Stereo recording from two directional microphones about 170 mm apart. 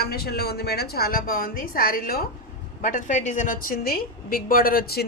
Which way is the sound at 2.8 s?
45° left (ahead or behind).